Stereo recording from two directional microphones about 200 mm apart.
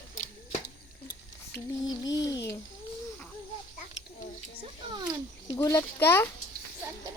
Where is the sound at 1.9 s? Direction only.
20° left (ahead or behind).